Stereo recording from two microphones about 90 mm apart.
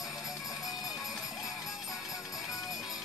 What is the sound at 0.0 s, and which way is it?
Music, 5° right (ahead or behind).